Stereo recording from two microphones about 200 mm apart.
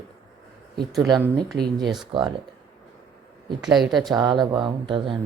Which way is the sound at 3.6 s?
Centre (ahead or behind).